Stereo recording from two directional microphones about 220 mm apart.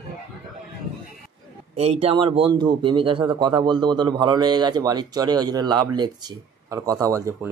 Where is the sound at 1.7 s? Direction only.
30° right (ahead or behind).